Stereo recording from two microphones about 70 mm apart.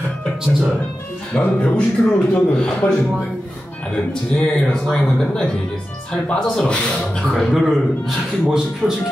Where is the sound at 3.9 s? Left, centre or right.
Centre.